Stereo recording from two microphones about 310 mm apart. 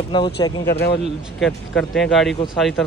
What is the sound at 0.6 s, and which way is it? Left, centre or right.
Speech, left.